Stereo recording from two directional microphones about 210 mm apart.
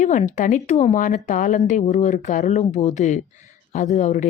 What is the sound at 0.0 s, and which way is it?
A woman's voice, 35° left (ahead or behind).